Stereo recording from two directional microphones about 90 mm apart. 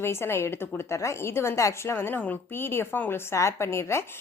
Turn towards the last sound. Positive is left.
turn(degrees=30)  # may be behind; listen again after turning